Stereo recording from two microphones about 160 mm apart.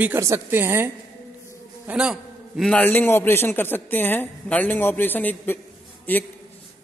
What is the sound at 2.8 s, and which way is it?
A woman's voice, 10° left (ahead or behind).